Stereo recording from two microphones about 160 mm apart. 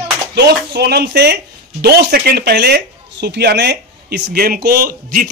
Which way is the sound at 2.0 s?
80° right.